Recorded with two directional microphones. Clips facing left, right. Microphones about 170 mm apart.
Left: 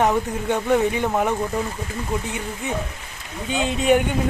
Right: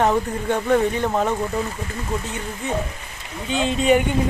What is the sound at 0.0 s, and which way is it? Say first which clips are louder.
Speech: right 1 dB; 10° left (ahead or behind).